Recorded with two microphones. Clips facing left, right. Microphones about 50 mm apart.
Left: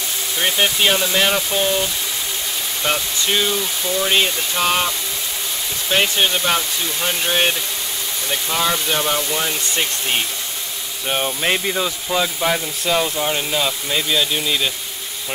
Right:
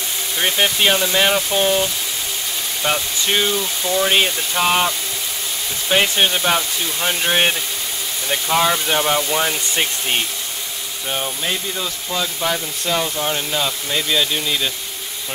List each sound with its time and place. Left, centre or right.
0.4 s speech: centre
3.3 s speech: centre
11.1 s speech: centre
11.4 s speech: left
11.7 s speech: centre